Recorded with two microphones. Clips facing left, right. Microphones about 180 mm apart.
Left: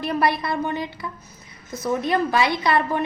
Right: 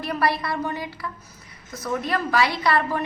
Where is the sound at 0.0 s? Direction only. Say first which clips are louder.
Left 2 dB; 20° left (ahead or behind).